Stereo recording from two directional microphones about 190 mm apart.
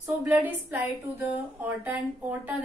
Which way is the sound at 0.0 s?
10° right (ahead or behind).